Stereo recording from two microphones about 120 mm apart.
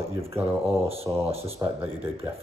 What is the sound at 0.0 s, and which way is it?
Speech, 20° right (ahead or behind).